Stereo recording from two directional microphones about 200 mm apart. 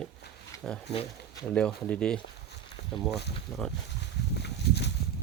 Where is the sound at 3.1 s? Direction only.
55° left (ahead or behind).